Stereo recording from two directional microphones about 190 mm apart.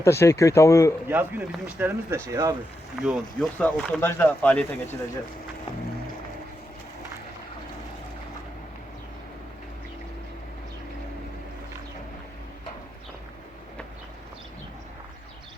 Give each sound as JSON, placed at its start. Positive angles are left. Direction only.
{"t": 0.0, "sound": "speech", "side_deg": 15}
{"t": 1.0, "sound": "speech", "side_deg": -10}
{"t": 3.0, "sound": "speech", "side_deg": 0}